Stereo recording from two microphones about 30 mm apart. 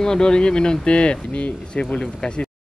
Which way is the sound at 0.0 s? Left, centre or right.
Left.